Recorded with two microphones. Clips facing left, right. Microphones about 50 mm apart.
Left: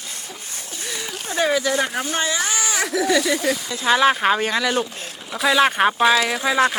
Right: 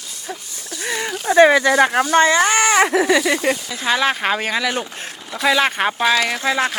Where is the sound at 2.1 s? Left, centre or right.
Right.